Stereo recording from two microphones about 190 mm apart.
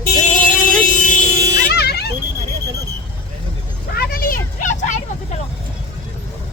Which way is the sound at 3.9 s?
50° left (ahead or behind).